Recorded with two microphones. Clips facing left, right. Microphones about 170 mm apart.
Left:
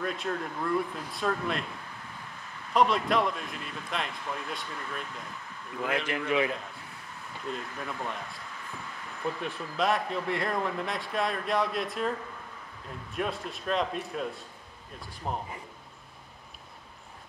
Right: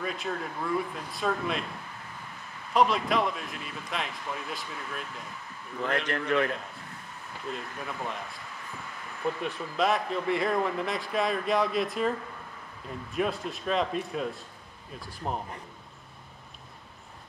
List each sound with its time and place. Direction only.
0.0 s speech: centre (ahead or behind)
2.7 s speech: centre (ahead or behind)
9.4 s speech: centre (ahead or behind)